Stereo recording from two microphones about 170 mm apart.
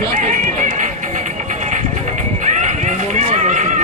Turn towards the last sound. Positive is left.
turn(degrees=-45)  # may be behind; listen again after turning